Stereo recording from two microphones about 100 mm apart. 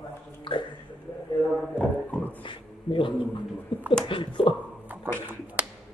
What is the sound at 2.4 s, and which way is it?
Speech, 60° left (ahead or behind).